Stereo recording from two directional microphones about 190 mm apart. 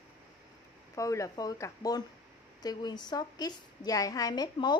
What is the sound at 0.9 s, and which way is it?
A woman's voice, 15° left (ahead or behind).